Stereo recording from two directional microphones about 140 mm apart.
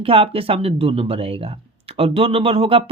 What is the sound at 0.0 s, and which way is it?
A woman's voice, 40° right (ahead or behind).